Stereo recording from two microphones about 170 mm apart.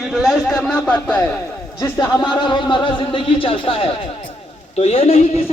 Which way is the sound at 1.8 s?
20° left (ahead or behind).